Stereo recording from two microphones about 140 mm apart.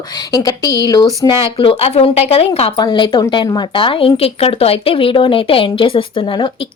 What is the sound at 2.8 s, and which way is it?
A woman's voice, 35° left (ahead or behind).